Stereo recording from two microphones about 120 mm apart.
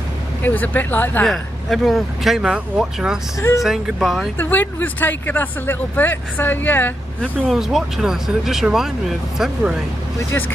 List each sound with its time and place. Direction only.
0.4 s speech: 15° left (ahead or behind)
1.2 s speech: centre (ahead or behind)
3.3 s speech: 25° left (ahead or behind)
3.6 s speech: centre (ahead or behind)
4.4 s speech: 15° left (ahead or behind)
7.2 s speech: 5° right (ahead or behind)